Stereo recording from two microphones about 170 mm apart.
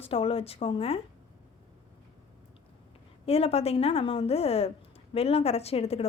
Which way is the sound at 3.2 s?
35° left (ahead or behind).